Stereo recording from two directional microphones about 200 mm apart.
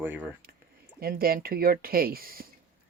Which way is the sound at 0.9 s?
50° right (ahead or behind).